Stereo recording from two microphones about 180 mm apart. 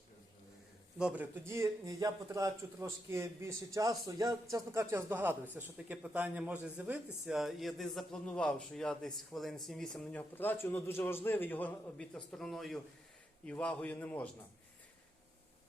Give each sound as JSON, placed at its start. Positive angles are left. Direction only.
{"t": 0.9, "sound": "a man's voice", "side_deg": -5}